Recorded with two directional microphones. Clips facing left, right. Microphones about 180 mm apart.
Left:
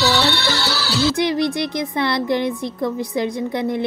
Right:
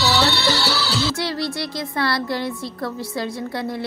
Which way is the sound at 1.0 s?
20° left (ahead or behind).